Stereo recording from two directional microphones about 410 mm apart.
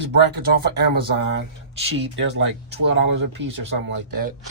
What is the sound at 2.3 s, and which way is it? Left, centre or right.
Speech, right.